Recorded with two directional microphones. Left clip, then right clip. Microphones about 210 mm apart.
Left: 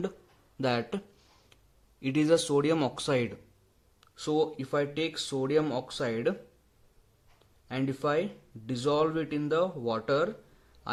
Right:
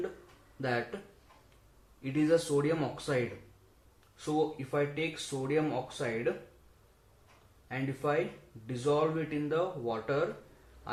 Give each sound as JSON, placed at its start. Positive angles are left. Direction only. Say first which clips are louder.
{"t": 0.6, "sound": "speech", "louder": "left 4 dB", "side_deg": 50}
{"t": 2.0, "sound": "speech", "louder": "left 3 dB", "side_deg": 50}
{"t": 4.2, "sound": "speech", "louder": "left 3 dB", "side_deg": 45}
{"t": 7.7, "sound": "speech", "louder": "left 3 dB", "side_deg": 45}